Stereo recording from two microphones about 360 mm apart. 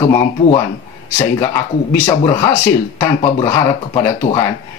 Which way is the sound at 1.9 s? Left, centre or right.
Centre.